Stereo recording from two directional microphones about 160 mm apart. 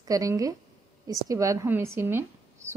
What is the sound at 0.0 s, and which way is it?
A woman's voice, 20° right (ahead or behind).